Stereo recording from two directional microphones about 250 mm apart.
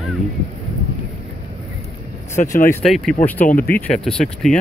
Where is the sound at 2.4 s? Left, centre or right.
Left.